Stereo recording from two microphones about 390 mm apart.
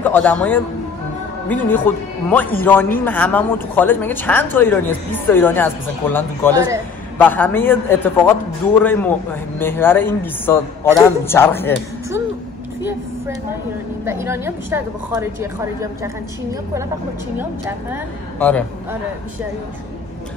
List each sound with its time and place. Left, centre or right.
0.0 s a man's voice: centre
6.5 s a woman's voice: centre
7.2 s speech: centre
14.0 s a woman's voice: centre
17.4 s speech: centre